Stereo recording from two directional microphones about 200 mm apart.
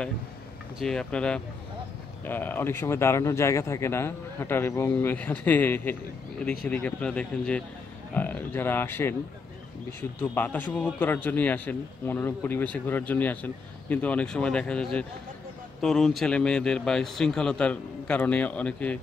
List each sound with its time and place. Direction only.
0.7 s a man's voice: centre (ahead or behind)